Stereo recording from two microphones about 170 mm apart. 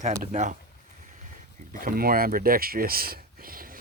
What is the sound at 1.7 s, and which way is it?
Speech, 55° right (ahead or behind).